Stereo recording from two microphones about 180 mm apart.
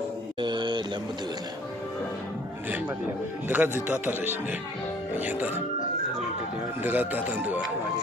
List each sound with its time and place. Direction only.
0.4 s a sound: 25° right (ahead or behind)
3.4 s a man's voice: 10° right (ahead or behind)
6.8 s a man's voice: 10° right (ahead or behind)